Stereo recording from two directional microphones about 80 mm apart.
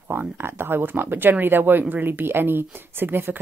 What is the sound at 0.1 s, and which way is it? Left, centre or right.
Speech, right.